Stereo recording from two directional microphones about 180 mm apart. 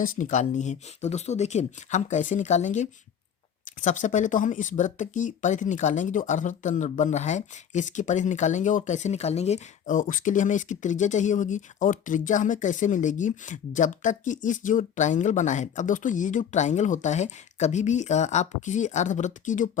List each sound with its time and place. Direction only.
0.0 s speech: 45° left (ahead or behind)